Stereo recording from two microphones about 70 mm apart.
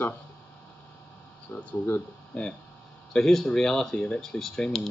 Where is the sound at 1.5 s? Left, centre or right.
Left.